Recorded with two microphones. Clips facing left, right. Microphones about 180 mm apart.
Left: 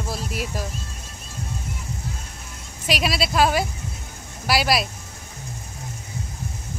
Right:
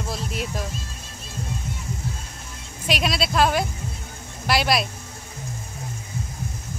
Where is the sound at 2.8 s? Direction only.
Centre (ahead or behind).